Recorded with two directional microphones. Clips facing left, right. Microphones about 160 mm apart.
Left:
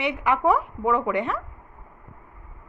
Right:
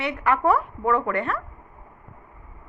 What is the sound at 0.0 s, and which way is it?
A woman's voice, 15° left (ahead or behind).